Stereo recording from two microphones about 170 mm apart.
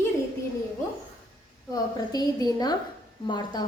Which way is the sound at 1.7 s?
20° left (ahead or behind).